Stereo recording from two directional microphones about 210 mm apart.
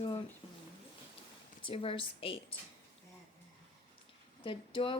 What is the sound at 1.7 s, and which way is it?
Speech, 25° left (ahead or behind).